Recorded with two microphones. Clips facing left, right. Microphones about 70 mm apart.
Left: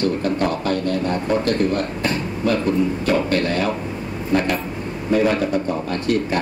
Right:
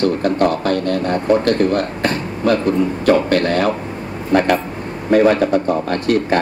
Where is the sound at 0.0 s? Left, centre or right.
Right.